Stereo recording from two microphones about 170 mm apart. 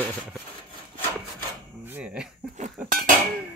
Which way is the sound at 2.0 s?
5° right (ahead or behind).